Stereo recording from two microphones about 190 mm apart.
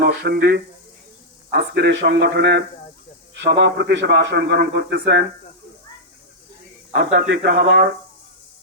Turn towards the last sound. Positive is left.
turn(degrees=-65)  # may be behind; listen again after turning